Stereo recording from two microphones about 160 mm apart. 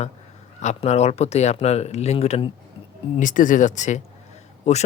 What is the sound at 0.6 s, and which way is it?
Speech, 45° left (ahead or behind).